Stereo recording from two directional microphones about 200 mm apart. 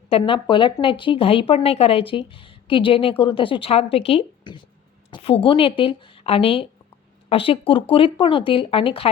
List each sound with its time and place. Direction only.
0.1 s speech: 25° left (ahead or behind)